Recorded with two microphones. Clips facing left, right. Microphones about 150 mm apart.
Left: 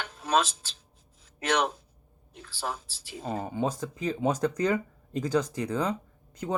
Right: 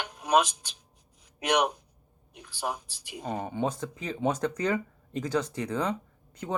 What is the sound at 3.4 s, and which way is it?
Speech, 5° left (ahead or behind).